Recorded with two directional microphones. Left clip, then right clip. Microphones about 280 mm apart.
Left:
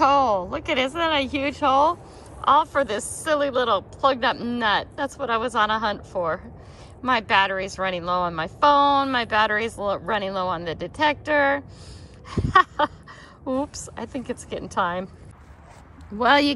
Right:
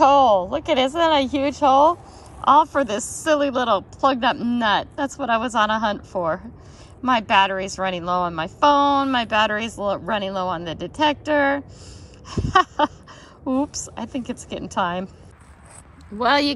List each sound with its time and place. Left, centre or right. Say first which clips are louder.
0.0 s a woman's voice: right 4 dB; centre
12.3 s a sound: even; centre
13.5 s a woman's voice: right 3 dB; centre
16.2 s speech: even; centre